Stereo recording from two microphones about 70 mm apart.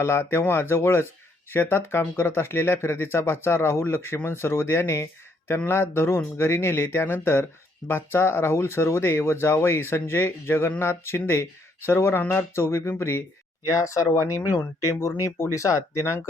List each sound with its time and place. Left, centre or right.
0.0 s speech: left
13.7 s speech: left